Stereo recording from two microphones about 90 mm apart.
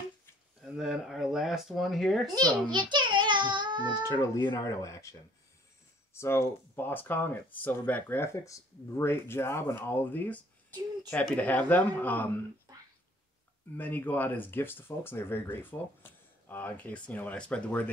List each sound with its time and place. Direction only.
0.6 s speech: centre (ahead or behind)
2.3 s a child's voice: 50° right (ahead or behind)
4.6 s speech: 35° left (ahead or behind)
6.1 s speech: 30° left (ahead or behind)
13.7 s speech: 20° left (ahead or behind)